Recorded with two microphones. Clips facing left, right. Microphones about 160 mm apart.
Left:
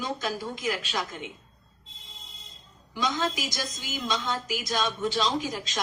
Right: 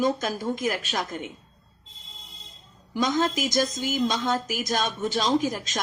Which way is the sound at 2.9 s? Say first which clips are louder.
Right 5 dB; 45° right (ahead or behind).